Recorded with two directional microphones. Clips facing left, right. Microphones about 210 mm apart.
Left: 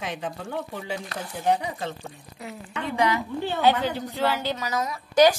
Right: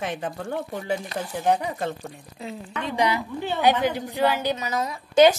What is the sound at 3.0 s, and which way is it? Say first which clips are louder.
A woman's voice: even; 15° right (ahead or behind).